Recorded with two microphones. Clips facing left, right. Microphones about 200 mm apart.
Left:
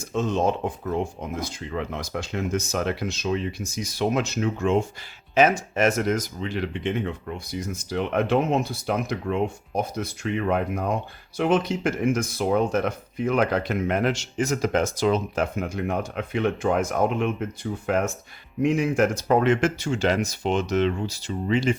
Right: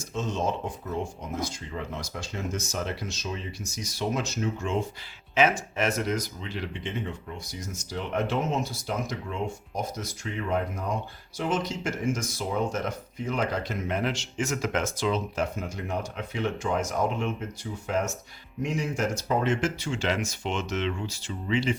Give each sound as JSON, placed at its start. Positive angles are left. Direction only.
{"t": 0.0, "sound": "speech", "side_deg": 60}
{"t": 5.3, "sound": "speech", "side_deg": 40}